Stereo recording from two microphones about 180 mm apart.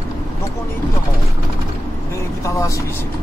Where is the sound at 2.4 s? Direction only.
15° left (ahead or behind).